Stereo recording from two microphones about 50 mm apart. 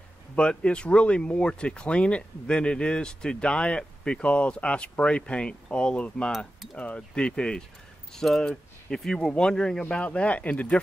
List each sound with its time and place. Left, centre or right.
0.4 s speech: centre
6.3 s a sound: centre
6.8 s speech: left